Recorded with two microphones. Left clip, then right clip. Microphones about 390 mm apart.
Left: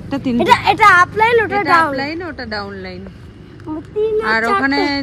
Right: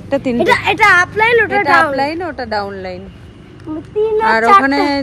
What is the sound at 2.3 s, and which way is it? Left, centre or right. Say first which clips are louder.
Speech: right 5 dB; right.